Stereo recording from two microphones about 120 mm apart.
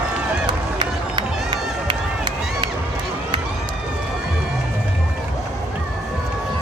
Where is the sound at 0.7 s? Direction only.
40° right (ahead or behind).